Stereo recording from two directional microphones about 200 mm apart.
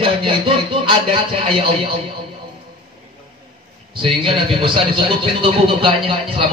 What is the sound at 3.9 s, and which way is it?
Speech, 25° right (ahead or behind).